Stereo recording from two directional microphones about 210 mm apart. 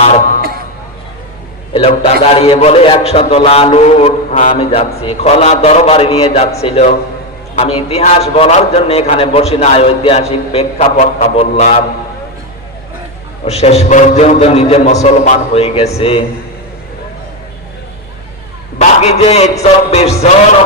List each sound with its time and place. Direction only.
0.0 s a sound: 30° left (ahead or behind)
1.9 s a man's voice: 30° left (ahead or behind)
13.4 s a man's voice: 30° left (ahead or behind)
18.8 s a man's voice: 30° left (ahead or behind)